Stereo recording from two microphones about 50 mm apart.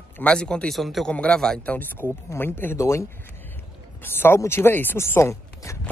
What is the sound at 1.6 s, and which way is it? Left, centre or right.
Speech, left.